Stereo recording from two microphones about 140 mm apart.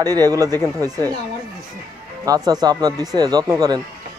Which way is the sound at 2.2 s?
25° right (ahead or behind).